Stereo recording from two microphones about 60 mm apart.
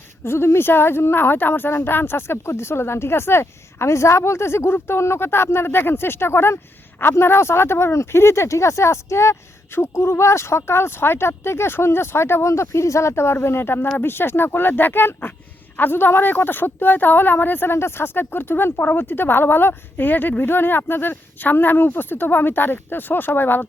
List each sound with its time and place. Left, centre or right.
0.3 s speech: left